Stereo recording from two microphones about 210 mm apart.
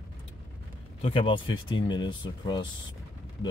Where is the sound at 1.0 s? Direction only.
25° left (ahead or behind).